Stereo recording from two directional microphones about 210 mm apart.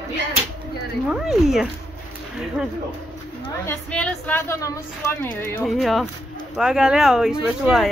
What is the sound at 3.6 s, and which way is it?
Speech, 5° left (ahead or behind).